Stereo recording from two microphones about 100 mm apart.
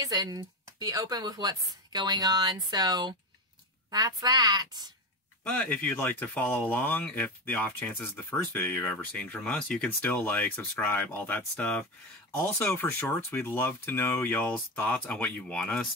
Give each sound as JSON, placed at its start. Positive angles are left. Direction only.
{"t": 0.0, "sound": "speech", "side_deg": -40}
{"t": 5.4, "sound": "speech", "side_deg": 15}